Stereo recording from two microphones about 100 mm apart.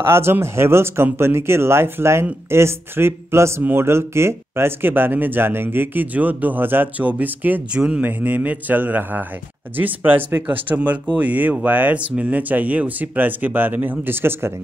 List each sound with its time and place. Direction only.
0.0 s speech: 25° right (ahead or behind)